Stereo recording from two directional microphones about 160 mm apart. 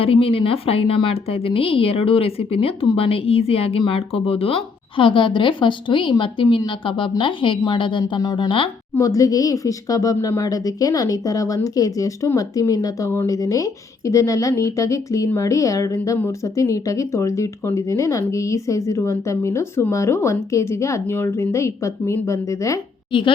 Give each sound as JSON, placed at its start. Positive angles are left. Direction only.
{"t": 0.0, "sound": "a woman's voice", "side_deg": 35}
{"t": 23.1, "sound": "a woman's voice", "side_deg": 30}